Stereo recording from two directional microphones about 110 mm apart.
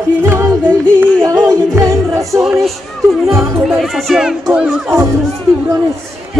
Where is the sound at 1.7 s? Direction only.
30° right (ahead or behind).